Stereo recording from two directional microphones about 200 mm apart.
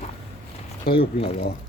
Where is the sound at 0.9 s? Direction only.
50° left (ahead or behind).